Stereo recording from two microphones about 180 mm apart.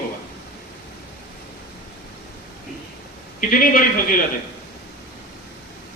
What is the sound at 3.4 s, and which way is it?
Speech, 50° left (ahead or behind).